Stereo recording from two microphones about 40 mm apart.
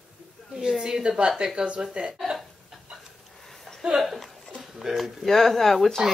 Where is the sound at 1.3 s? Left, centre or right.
Centre.